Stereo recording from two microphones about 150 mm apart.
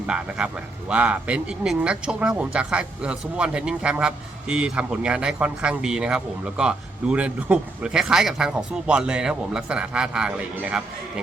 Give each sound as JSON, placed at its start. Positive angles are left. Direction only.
{"t": 0.1, "sound": "speech", "side_deg": -5}